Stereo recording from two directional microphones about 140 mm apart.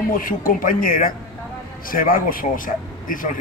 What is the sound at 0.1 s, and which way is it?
A man's voice, 80° left.